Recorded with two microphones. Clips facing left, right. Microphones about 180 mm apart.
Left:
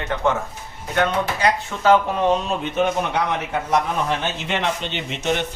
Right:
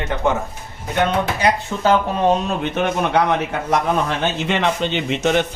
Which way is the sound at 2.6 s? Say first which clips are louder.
Right 1 dB; 70° right (ahead or behind).